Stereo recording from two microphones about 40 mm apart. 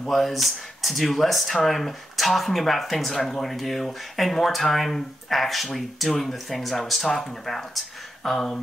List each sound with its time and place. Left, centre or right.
0.1 s speech: centre